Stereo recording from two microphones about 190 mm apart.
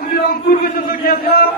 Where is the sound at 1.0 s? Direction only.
50° left (ahead or behind).